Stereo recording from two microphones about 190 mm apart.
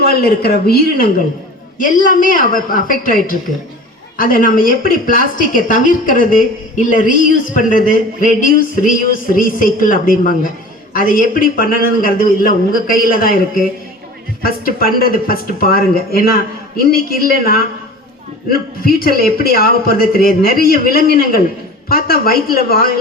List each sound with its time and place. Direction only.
0.0 s a woman's voice: 55° left (ahead or behind)
18.9 s a woman's voice: 50° left (ahead or behind)